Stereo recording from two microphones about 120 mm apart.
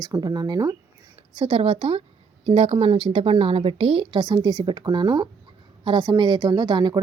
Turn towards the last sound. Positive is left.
turn(degrees=-35)  # may be behind; listen again after turning